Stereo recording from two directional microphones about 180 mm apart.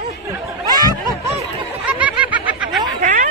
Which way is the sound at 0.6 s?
20° right (ahead or behind).